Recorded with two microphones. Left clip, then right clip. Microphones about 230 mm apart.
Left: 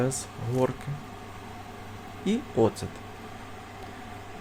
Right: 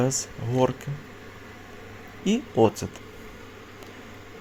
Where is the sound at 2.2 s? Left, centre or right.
Centre.